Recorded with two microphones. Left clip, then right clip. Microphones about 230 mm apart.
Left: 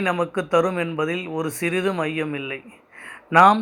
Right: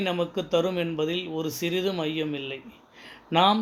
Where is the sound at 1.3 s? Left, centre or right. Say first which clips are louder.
Left 4 dB; left.